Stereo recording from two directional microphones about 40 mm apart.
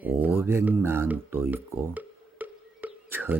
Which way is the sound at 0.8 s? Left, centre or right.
Right.